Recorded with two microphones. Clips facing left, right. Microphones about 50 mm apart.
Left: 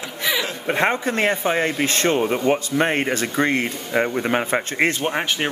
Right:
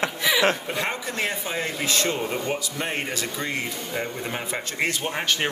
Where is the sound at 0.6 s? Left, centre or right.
Left.